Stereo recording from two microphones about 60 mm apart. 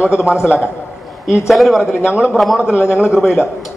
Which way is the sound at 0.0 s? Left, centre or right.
Centre.